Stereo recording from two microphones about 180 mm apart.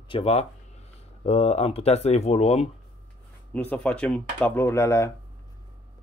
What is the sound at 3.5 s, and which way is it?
Speech, 10° left (ahead or behind).